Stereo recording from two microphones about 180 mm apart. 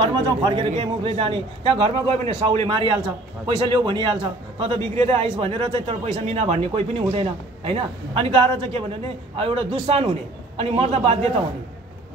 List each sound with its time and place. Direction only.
0.0 s a man's voice: 25° right (ahead or behind)